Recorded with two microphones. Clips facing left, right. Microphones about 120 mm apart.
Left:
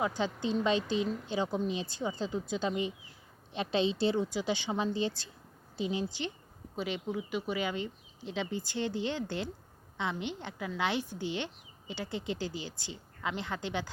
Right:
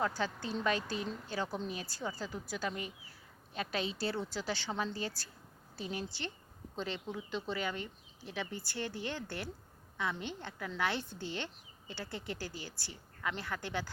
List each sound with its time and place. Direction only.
0.0 s a woman's voice: 20° left (ahead or behind)